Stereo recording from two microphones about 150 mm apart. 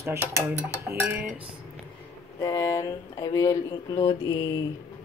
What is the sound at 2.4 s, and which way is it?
Speech, 25° left (ahead or behind).